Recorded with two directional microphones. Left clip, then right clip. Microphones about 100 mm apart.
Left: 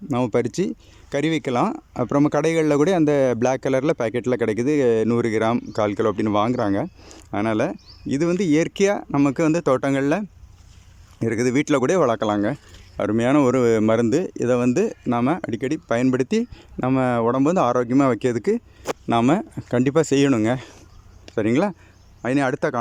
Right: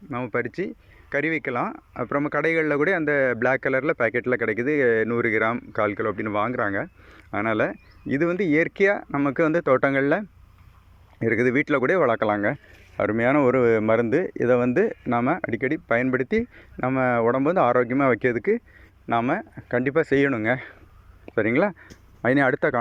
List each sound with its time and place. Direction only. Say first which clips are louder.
0.1 s speech: left 7 dB; 65° left (ahead or behind)
0.3 s speech: left 5 dB; 45° left (ahead or behind); by 18.6 s 15° left (ahead or behind)
19.0 s speech: left 3 dB; 40° left (ahead or behind); by 21.8 s 15° left (ahead or behind)
22.2 s speech: right 1 dB; 5° left (ahead or behind)